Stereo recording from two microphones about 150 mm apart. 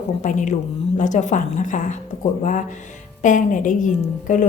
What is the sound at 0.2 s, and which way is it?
A woman's voice, 55° left (ahead or behind).